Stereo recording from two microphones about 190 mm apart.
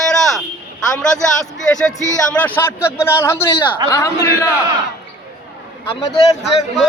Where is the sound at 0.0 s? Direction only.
Centre (ahead or behind).